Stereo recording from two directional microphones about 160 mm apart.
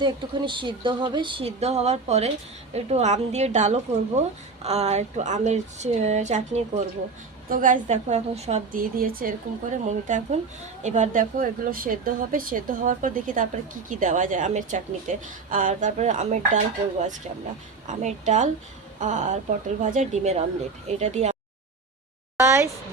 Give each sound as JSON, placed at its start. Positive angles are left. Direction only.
{"t": 0.0, "sound": "a woman's voice", "side_deg": -30}
{"t": 8.7, "sound": "a woman's voice", "side_deg": -65}
{"t": 17.8, "sound": "a woman's voice", "side_deg": -45}
{"t": 22.4, "sound": "a woman's voice", "side_deg": -15}